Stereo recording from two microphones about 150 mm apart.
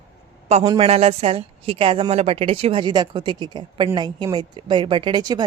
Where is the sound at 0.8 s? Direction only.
40° right (ahead or behind).